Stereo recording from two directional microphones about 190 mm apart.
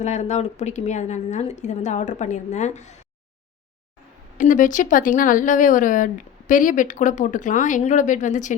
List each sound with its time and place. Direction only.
0.0 s a woman's voice: 35° left (ahead or behind)
4.4 s a woman's voice: 45° left (ahead or behind)